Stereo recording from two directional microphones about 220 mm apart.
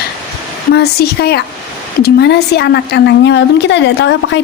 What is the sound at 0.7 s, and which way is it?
A woman's voice, 45° left (ahead or behind).